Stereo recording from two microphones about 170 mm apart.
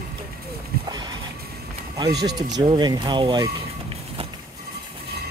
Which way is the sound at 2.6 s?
25° right (ahead or behind).